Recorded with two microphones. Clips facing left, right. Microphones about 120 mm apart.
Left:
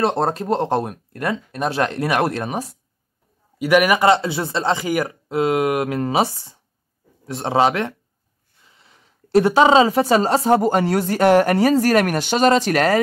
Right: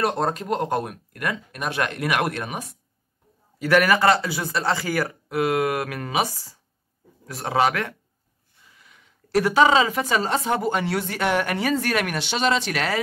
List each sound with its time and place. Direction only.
0.0 s a woman's voice: 30° left (ahead or behind)
3.5 s a woman's voice: 15° left (ahead or behind); by 13.0 s 45° left (ahead or behind)